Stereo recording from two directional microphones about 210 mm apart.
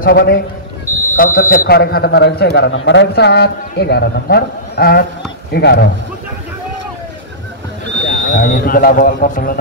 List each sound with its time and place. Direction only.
0.0 s a man's voice: 45° left (ahead or behind)
8.1 s speech: 40° left (ahead or behind)